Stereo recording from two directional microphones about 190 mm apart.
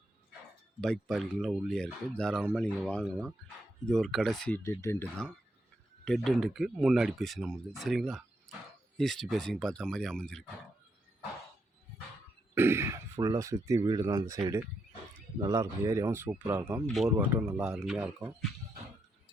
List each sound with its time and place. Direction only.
0.8 s speech: centre (ahead or behind)
12.5 s speech: 15° right (ahead or behind)
17.1 s speech: 10° right (ahead or behind)